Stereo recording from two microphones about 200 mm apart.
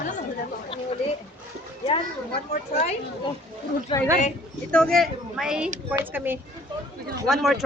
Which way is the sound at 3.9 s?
25° left (ahead or behind).